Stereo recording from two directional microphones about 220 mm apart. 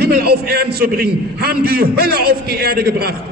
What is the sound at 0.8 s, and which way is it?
A man's voice, 45° right (ahead or behind).